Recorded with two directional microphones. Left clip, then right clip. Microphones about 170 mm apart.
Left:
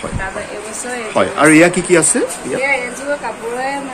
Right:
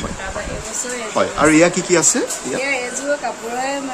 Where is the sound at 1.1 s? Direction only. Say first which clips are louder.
Left 4 dB; centre (ahead or behind).